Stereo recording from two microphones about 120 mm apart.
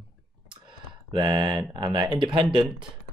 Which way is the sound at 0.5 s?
40° right (ahead or behind).